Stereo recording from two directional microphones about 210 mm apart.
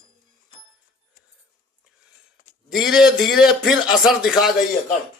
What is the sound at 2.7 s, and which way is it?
A man's voice, centre (ahead or behind).